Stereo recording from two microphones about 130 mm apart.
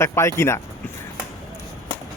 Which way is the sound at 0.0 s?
20° left (ahead or behind).